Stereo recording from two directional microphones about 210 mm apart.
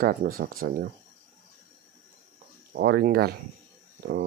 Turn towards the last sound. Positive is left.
turn(degrees=-45)  # may be behind; listen again after turning